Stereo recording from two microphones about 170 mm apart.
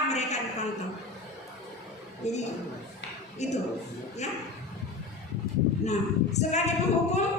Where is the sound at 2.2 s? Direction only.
40° left (ahead or behind).